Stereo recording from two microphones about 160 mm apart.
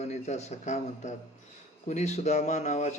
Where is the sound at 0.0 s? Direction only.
45° left (ahead or behind).